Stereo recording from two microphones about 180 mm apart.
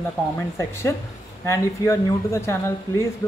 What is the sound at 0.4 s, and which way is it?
Speech, 15° left (ahead or behind).